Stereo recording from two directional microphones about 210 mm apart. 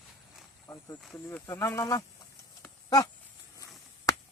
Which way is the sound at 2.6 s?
15° left (ahead or behind).